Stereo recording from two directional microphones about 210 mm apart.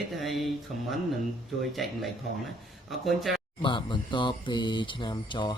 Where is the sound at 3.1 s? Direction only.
Centre (ahead or behind).